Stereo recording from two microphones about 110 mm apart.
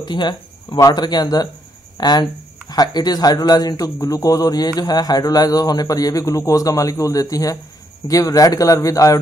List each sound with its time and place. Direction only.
0.0 s a man's voice: 45° left (ahead or behind)